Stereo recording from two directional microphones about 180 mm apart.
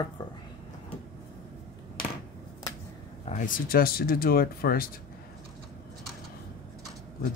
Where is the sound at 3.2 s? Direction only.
45° left (ahead or behind).